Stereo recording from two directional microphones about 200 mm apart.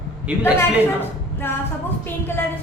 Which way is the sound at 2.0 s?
10° left (ahead or behind).